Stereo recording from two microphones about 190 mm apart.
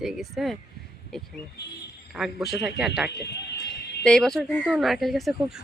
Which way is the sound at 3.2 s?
60° left (ahead or behind).